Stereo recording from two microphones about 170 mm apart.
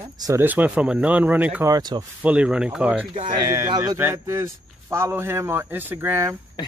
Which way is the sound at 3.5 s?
20° right (ahead or behind).